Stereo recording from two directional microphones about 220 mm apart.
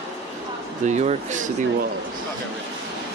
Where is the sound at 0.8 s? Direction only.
30° right (ahead or behind).